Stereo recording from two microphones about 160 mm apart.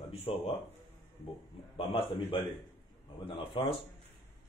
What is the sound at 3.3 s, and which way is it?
Speech, 35° left (ahead or behind).